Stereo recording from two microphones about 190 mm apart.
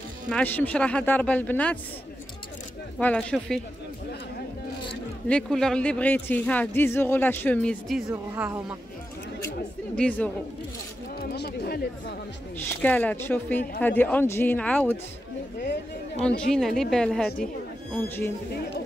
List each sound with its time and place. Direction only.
0.3 s speech: 10° left (ahead or behind)
3.0 s a woman's voice: 5° left (ahead or behind)
5.3 s speech: 5° left (ahead or behind)
8.4 s speech: 5° right (ahead or behind)
9.9 s speech: 5° left (ahead or behind)
11.1 s speech: 55° left (ahead or behind)
12.6 s speech: 10° left (ahead or behind)
16.2 s a woman's voice: 5° left (ahead or behind)